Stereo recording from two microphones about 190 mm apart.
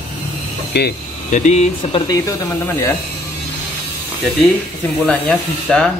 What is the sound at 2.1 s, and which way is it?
Speech, 15° left (ahead or behind).